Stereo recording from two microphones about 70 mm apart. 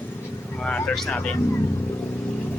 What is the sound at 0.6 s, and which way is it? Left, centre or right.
Vehicle, centre.